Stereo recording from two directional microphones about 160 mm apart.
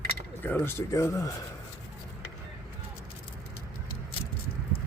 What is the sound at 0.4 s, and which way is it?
Speech, 15° left (ahead or behind).